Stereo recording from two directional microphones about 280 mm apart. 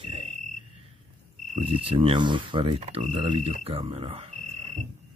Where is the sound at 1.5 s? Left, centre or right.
Centre.